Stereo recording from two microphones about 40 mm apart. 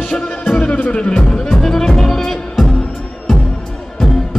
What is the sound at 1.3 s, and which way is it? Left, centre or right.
Music, centre.